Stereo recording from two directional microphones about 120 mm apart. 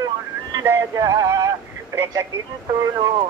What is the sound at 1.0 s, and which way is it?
Male singing, 30° right (ahead or behind).